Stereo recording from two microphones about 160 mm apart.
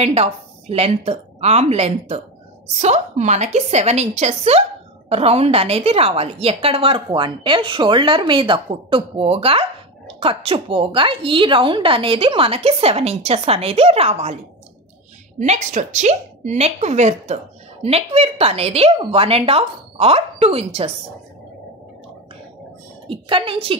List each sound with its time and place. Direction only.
0.0 s a woman's voice: 40° right (ahead or behind)
15.3 s a woman's voice: 45° right (ahead or behind)
23.0 s a woman's voice: 35° right (ahead or behind)